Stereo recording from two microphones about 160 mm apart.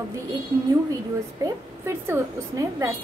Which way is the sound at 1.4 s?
20° right (ahead or behind).